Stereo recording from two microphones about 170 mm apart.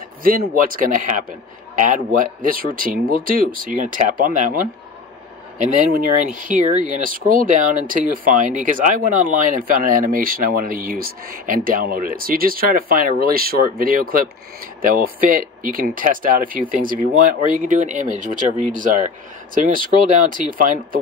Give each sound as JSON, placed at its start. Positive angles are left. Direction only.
{"t": 0.2, "sound": "speech", "side_deg": -55}